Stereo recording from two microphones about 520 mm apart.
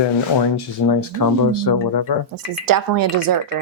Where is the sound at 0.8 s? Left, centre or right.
Left.